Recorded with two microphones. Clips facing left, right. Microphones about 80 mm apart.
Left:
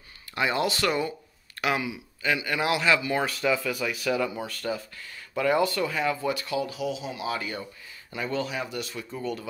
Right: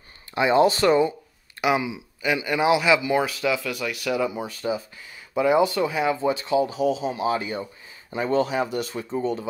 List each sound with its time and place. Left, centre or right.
0.3 s speech: right
3.3 s speech: centre
4.3 s speech: centre